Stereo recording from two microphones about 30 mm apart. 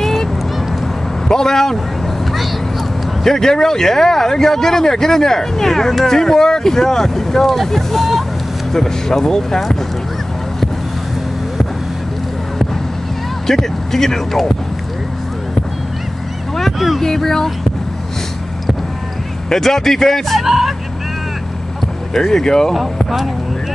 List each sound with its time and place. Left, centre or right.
0.0 s honk: centre
1.3 s speech: centre
3.3 s speech: centre
13.5 s speech: centre
16.6 s speech: centre
17.0 s speech: centre
19.5 s speech: centre
20.3 s speech: centre
22.1 s speech: centre